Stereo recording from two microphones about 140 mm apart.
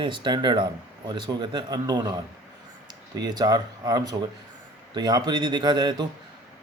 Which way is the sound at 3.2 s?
30° right (ahead or behind).